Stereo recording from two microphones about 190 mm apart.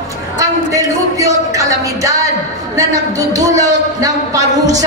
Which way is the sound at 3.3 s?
20° right (ahead or behind).